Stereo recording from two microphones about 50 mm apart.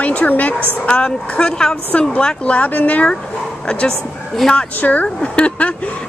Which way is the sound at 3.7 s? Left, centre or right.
Centre.